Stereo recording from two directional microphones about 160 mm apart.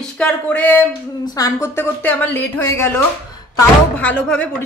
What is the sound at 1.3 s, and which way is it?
A woman's voice, 20° left (ahead or behind).